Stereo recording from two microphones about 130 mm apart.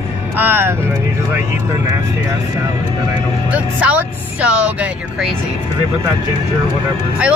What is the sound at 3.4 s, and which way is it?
Speech, 10° right (ahead or behind).